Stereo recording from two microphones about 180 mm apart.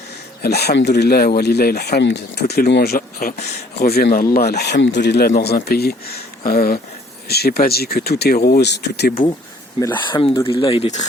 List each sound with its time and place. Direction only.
0.4 s speech: 65° left (ahead or behind)
10.1 s speech: 30° left (ahead or behind)